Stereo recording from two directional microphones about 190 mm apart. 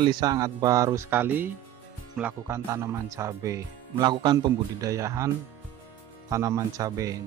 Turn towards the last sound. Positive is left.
turn(degrees=-15)  # may be behind; listen again after turning